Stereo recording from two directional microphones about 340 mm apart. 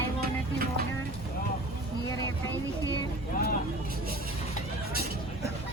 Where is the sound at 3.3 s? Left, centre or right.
Left.